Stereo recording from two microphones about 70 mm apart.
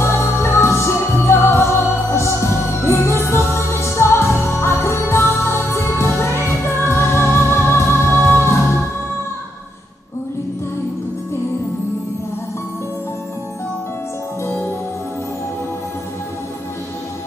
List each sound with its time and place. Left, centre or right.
0.0 s music: left
14.4 s music: left